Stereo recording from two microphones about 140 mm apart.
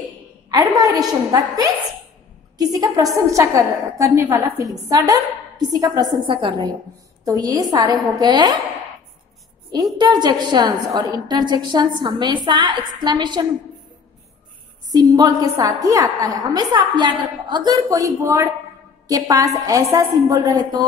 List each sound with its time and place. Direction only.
0.5 s a woman's voice: 30° right (ahead or behind)
9.9 s a woman's voice: 30° right (ahead or behind)
14.9 s a woman's voice: 30° right (ahead or behind)